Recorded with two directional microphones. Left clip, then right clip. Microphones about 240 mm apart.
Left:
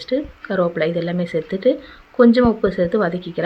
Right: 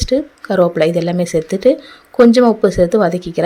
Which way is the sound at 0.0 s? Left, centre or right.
Right.